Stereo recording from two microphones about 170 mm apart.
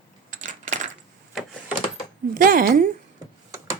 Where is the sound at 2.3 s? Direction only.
55° right (ahead or behind).